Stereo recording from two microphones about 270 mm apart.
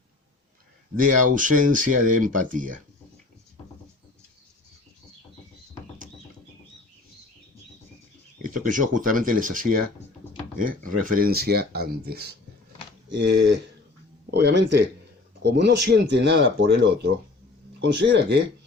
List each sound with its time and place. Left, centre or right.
0.9 s speech: right
8.4 s speech: right
11.0 s speech: right